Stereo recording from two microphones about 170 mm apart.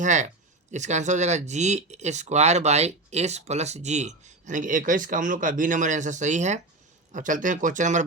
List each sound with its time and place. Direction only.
0.0 s speech: 45° right (ahead or behind)